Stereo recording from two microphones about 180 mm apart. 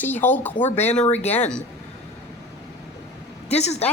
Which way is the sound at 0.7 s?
35° left (ahead or behind).